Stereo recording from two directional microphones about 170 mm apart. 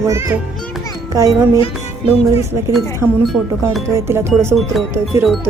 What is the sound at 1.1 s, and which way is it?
Music, 20° right (ahead or behind).